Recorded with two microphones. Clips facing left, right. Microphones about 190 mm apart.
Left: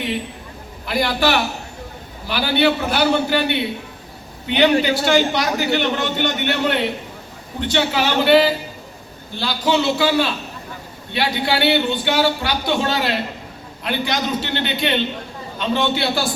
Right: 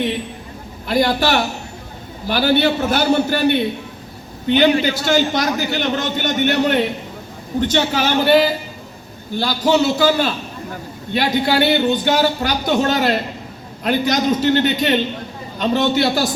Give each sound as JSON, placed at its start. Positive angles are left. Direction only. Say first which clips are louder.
{"t": 0.9, "sound": "a man's voice", "louder": "right 2 dB", "side_deg": -45}